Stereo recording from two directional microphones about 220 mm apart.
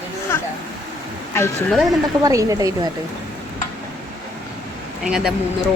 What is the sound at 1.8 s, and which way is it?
Speech, 15° right (ahead or behind).